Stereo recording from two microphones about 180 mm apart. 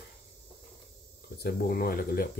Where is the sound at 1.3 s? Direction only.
60° left (ahead or behind).